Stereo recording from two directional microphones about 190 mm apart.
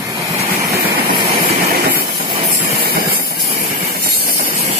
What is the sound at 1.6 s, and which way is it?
Train, 55° right (ahead or behind).